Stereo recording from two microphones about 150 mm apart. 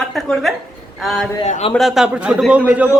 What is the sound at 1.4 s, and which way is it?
Speech, 50° left (ahead or behind).